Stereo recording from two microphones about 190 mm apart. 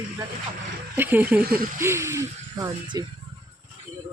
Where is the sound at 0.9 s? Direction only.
10° right (ahead or behind).